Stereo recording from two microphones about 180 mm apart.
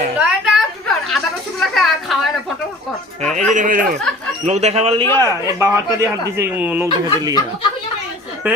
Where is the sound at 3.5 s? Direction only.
45° right (ahead or behind).